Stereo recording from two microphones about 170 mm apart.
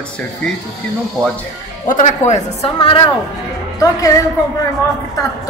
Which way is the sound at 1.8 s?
50° left (ahead or behind).